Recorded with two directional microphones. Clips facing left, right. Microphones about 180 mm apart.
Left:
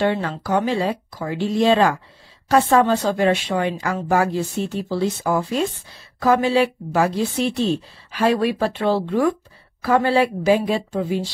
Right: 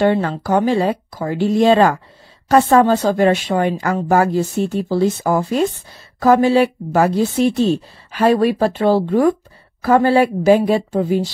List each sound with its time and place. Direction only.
0.0 s speech: 45° right (ahead or behind)